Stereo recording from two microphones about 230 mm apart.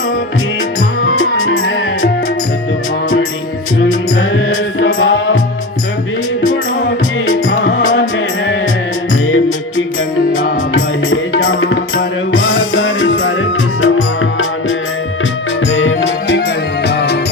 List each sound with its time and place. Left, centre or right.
1.2 s music: left
4.1 s music: left
7.3 s music: left
9.2 s music: left